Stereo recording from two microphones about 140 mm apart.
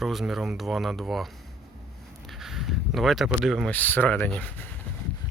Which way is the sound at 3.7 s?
10° left (ahead or behind).